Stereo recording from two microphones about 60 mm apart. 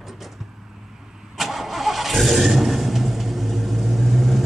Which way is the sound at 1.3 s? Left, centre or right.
Centre.